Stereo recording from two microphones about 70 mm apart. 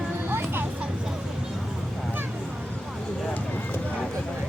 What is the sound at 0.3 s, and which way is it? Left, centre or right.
Music, right.